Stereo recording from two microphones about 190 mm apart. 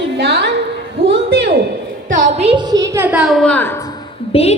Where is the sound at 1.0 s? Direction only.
60° right (ahead or behind).